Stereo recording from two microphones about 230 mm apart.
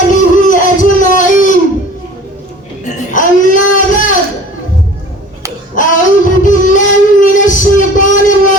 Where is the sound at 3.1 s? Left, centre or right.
Left.